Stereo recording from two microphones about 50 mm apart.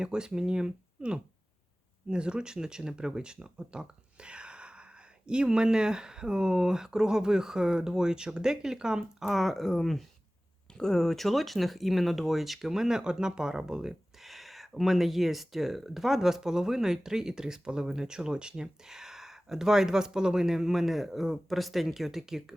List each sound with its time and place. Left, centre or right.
0.0 s speech: centre
9.3 s speech: centre
14.2 s speech: centre